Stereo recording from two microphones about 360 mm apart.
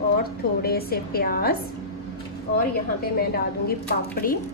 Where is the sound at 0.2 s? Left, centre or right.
Left.